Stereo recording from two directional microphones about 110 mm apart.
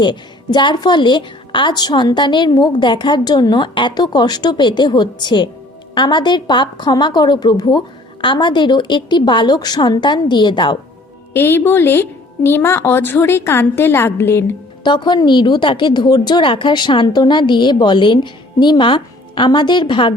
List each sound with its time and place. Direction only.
0.0 s a woman's voice: 45° left (ahead or behind)
11.3 s a woman's voice: 20° left (ahead or behind)
14.8 s a woman's voice: 45° left (ahead or behind)